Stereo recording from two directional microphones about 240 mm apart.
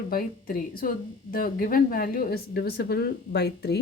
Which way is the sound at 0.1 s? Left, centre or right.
Left.